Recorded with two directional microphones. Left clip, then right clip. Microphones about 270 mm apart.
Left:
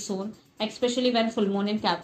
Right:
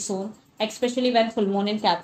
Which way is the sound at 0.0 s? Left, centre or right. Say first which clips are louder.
Right 3 dB; right.